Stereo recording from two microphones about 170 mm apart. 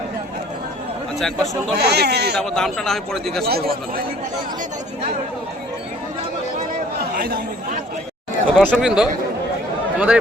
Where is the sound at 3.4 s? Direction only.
65° right (ahead or behind).